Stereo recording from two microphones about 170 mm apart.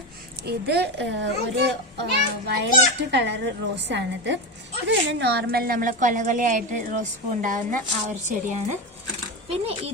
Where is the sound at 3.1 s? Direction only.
90° right.